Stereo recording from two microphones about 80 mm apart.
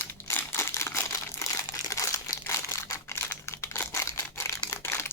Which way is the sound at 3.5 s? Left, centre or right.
Left.